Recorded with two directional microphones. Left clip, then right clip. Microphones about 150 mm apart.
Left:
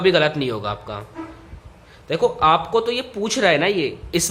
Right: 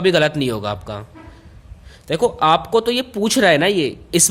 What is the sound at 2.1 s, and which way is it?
Speech, 55° right (ahead or behind).